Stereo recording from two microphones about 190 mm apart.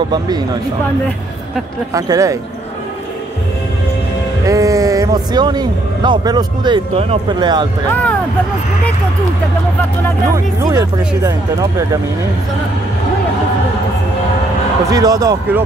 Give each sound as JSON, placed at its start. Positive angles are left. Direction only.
{"t": 2.0, "sound": "speech", "side_deg": -20}
{"t": 4.5, "sound": "a man's voice", "side_deg": -15}
{"t": 7.9, "sound": "speech", "side_deg": 10}
{"t": 10.3, "sound": "speech", "side_deg": -15}
{"t": 14.9, "sound": "speech", "side_deg": -20}